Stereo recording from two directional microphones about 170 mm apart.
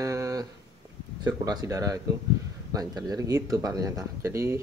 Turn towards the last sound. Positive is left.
turn(degrees=-15)  # may be behind; listen again after turning